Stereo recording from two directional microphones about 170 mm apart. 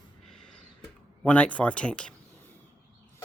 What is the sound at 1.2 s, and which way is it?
Speech, 10° left (ahead or behind).